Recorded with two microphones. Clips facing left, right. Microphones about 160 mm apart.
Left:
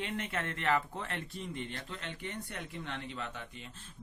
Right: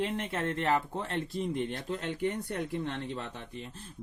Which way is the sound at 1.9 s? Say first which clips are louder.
Right 11 dB; 40° right (ahead or behind).